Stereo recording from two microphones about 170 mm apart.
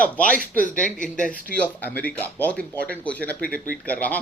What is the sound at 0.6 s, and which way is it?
Speech, 50° left (ahead or behind).